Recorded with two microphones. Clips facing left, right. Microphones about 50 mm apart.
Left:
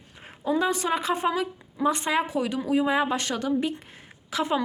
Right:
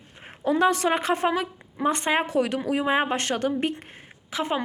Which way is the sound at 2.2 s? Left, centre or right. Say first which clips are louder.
Right 3 dB; right.